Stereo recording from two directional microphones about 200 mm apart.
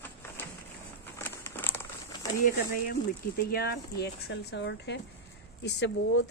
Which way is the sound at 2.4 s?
45° left (ahead or behind).